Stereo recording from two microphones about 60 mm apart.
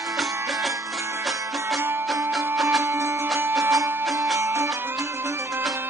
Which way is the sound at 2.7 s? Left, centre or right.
Right.